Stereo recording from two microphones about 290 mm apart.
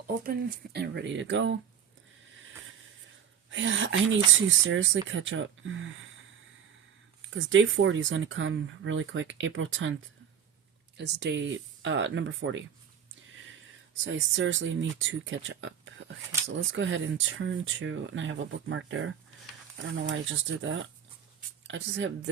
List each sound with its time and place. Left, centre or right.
0.3 s speech: right
3.5 s speech: right
7.3 s speech: right
10.9 s speech: right
14.0 s speech: right
20.6 s speech: right